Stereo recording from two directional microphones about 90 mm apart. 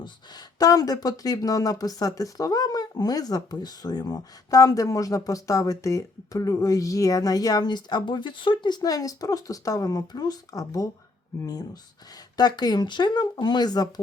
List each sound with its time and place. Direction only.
0.0 s speech: 45° left (ahead or behind)